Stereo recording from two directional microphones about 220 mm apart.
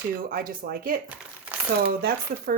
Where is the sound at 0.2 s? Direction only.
40° right (ahead or behind).